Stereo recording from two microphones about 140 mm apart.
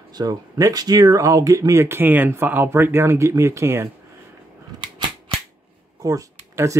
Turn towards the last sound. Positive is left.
turn(degrees=-25)  # may be behind; listen again after turning